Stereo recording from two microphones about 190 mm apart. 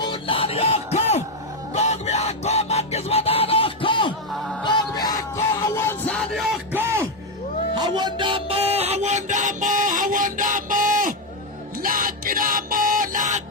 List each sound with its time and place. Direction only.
0.0 s music: 25° left (ahead or behind)
4.3 s music: centre (ahead or behind)
4.6 s music: 20° left (ahead or behind)
6.1 s music: centre (ahead or behind)
6.7 s music: 15° right (ahead or behind); by 13.4 s 40° right (ahead or behind)